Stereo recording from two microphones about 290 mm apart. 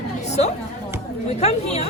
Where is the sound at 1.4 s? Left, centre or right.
Left.